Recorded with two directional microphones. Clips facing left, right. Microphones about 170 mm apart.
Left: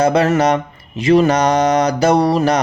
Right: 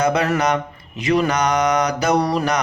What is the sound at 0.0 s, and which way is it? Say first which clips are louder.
A man's voice: left 5 dB; 30° left (ahead or behind).